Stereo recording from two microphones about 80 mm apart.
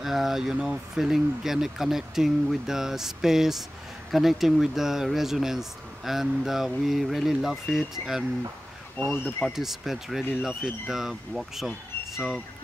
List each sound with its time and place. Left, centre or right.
0.0 s speech: centre
9.0 s speech: left
9.6 s speech: centre